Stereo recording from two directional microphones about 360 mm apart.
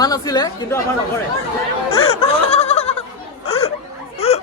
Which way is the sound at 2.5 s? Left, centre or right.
Centre.